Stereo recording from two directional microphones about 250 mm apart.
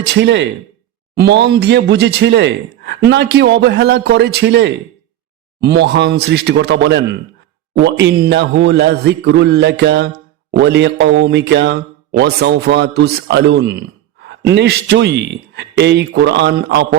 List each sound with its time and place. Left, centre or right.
0.0 s speech: right